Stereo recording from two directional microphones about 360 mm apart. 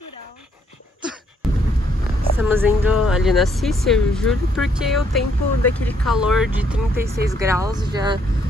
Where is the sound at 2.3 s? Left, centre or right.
Centre.